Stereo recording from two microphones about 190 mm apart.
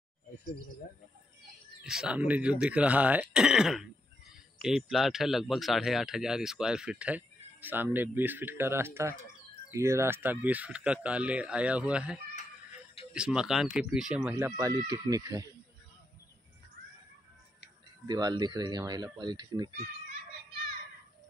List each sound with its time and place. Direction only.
1.8 s speech: 5° right (ahead or behind); by 15.4 s 20° right (ahead or behind)
18.0 s speech: 20° right (ahead or behind)